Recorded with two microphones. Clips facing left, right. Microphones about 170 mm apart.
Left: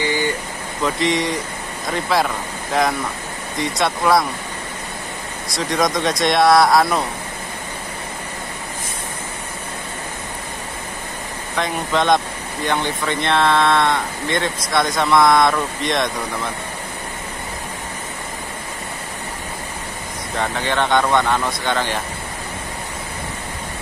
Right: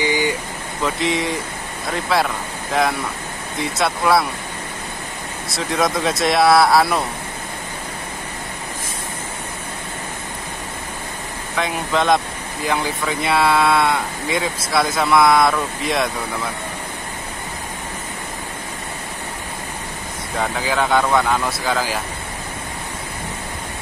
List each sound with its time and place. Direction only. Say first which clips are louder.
0.0 s vehicle: right 1 dB; 15° right (ahead or behind)
0.8 s speech: left 1 dB; centre (ahead or behind)
5.5 s speech: left 1 dB; 5° right (ahead or behind)
11.5 s speech: even; centre (ahead or behind)
20.3 s speech: even; 5° right (ahead or behind)